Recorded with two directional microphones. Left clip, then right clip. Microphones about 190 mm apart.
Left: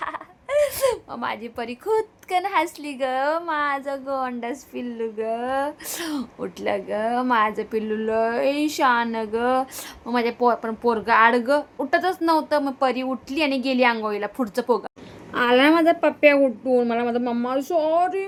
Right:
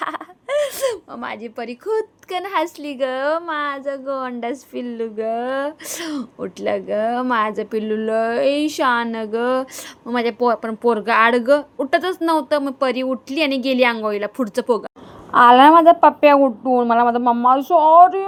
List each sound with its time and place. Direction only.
0.0 s speech: 30° right (ahead or behind); by 18.3 s 15° right (ahead or behind)